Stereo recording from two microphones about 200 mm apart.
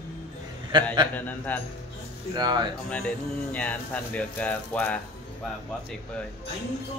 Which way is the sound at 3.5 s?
5° left (ahead or behind).